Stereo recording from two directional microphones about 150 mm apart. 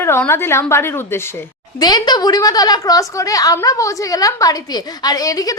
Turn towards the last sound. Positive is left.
turn(degrees=25)  # may be behind; listen again after turning